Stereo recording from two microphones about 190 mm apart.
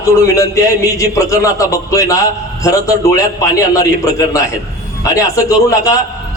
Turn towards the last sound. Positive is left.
turn(degrees=15)  # may be behind; listen again after turning